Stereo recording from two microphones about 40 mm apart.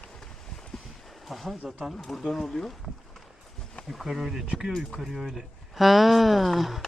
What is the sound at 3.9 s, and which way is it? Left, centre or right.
Speech, centre.